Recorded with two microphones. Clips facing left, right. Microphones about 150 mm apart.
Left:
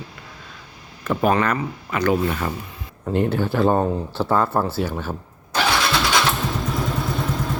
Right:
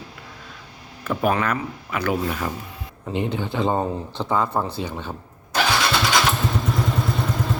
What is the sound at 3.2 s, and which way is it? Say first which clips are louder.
Speech: left 4 dB; 20° right (ahead or behind).